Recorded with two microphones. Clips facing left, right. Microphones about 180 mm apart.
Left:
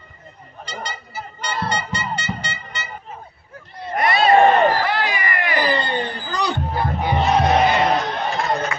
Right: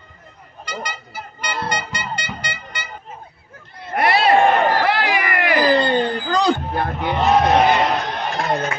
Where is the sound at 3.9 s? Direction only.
70° right (ahead or behind); by 6.5 s 90° right.